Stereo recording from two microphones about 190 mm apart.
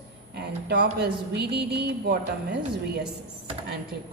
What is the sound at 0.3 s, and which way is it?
A woman's voice, 60° right (ahead or behind).